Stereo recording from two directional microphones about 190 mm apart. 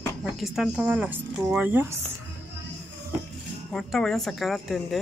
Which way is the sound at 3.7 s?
Centre (ahead or behind).